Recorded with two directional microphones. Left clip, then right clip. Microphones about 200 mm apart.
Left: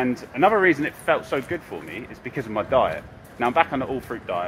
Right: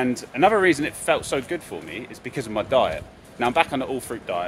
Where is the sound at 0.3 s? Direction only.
15° right (ahead or behind).